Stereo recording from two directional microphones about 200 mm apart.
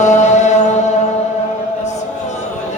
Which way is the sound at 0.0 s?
35° left (ahead or behind).